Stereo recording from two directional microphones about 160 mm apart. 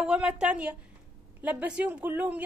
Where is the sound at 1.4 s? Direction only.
10° right (ahead or behind).